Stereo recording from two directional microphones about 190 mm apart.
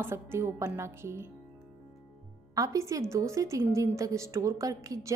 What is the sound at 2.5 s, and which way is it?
A woman's voice, 20° right (ahead or behind).